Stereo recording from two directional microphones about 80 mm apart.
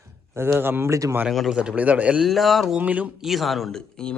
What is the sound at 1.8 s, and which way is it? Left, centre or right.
Speech, centre.